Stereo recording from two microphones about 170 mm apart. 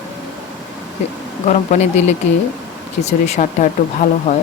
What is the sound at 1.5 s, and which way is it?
Speech, 40° left (ahead or behind).